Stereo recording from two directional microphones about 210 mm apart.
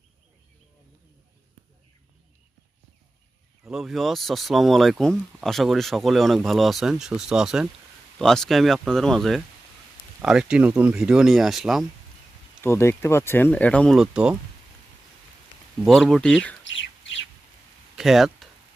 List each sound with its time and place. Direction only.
3.6 s speech: centre (ahead or behind)
12.6 s speech: 10° left (ahead or behind); by 14.3 s 5° right (ahead or behind)
15.8 s speech: centre (ahead or behind)
16.6 s bird: 60° left (ahead or behind)
17.9 s a sound: centre (ahead or behind)